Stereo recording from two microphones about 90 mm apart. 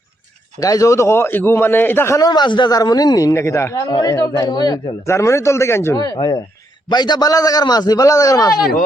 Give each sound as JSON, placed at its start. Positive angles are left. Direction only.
{"t": 0.6, "sound": "a man's voice", "side_deg": 40}
{"t": 2.1, "sound": "a man's voice", "side_deg": 50}
{"t": 3.3, "sound": "speech", "side_deg": 35}
{"t": 3.8, "sound": "a man's voice", "side_deg": 50}
{"t": 5.0, "sound": "speech", "side_deg": 30}
{"t": 6.9, "sound": "a man's voice", "side_deg": 55}